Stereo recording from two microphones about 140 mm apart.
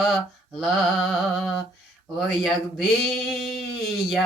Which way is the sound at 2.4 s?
Centre (ahead or behind).